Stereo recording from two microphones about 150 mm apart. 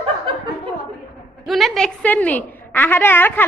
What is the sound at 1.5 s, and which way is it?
A woman's voice, centre (ahead or behind).